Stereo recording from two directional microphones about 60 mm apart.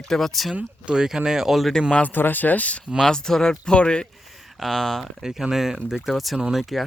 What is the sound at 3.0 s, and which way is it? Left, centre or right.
Speech, centre.